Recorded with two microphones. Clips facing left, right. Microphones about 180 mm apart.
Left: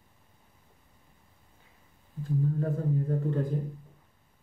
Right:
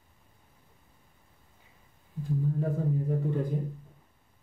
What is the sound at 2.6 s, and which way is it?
Speech, 5° right (ahead or behind).